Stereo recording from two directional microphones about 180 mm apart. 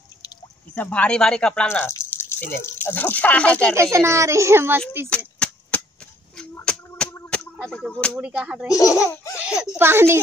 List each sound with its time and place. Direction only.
0.7 s speech: 10° left (ahead or behind)
3.9 s a child's voice: 15° right (ahead or behind)
5.1 s chop: 5° left (ahead or behind)
6.5 s a sound: 5° left (ahead or behind)
8.2 s speech: 5° right (ahead or behind)
8.7 s speech: 15° left (ahead or behind)
9.4 s a sound: 5° right (ahead or behind)
9.8 s a child's voice: 15° right (ahead or behind)